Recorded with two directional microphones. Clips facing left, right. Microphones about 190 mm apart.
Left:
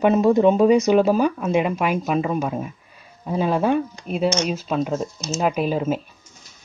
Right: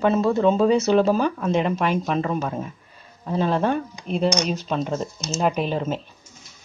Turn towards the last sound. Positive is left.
turn(degrees=5)  # may be behind; listen again after turning